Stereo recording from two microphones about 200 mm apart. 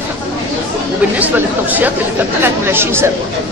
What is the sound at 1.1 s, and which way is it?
Speech, 10° right (ahead or behind).